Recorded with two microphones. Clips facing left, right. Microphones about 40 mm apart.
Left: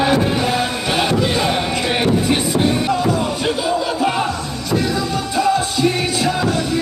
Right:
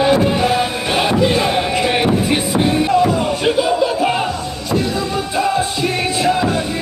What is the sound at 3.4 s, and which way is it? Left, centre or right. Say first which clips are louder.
Music: right 6 dB; centre.